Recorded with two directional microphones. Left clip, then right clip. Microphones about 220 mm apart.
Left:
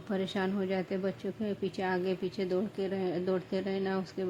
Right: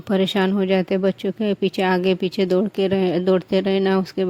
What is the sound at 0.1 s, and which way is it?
Speech, 35° right (ahead or behind).